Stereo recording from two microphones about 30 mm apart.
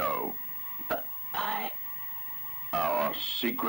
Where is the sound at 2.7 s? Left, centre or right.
Centre.